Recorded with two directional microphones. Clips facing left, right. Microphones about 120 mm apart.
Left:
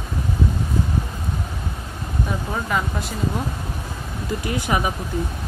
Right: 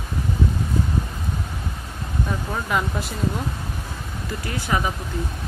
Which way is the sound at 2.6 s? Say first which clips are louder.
Right 2 dB; centre (ahead or behind).